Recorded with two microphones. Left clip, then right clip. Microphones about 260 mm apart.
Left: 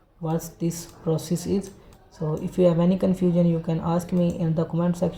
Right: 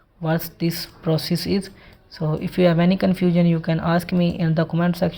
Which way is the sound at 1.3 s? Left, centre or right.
Right.